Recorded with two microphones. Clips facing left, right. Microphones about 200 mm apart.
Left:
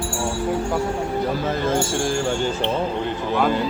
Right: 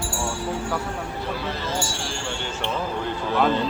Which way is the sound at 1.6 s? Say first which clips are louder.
Left 9 dB; 50° left (ahead or behind).